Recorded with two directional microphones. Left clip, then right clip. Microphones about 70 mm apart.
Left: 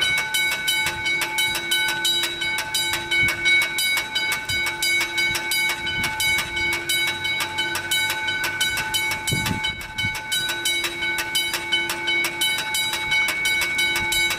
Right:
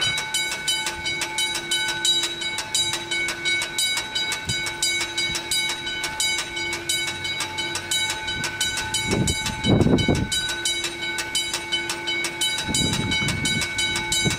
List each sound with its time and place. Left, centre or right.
0.7 s train: left
8.5 s train: left
11.3 s train: left